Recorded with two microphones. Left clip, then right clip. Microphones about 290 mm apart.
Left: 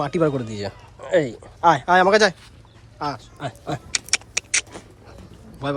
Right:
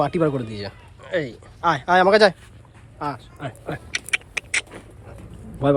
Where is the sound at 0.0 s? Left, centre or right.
Centre.